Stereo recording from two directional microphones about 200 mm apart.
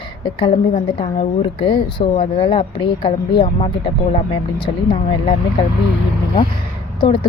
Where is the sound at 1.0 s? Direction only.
25° left (ahead or behind).